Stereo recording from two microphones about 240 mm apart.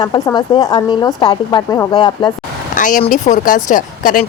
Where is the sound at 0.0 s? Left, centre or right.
Centre.